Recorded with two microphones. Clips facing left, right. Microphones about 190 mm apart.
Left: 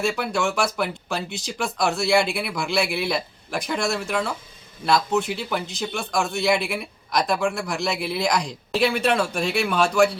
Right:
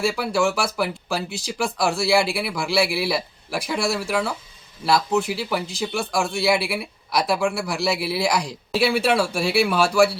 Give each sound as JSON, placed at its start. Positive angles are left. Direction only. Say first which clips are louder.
{"t": 0.0, "sound": "speech", "louder": "right 2 dB", "side_deg": -5}